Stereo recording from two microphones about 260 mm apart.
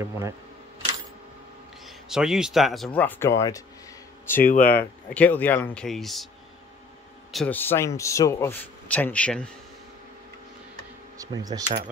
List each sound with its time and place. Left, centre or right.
2.0 s speech: centre
4.4 s speech: left
5.1 s speech: centre
7.3 s a man's voice: centre
11.1 s speech: centre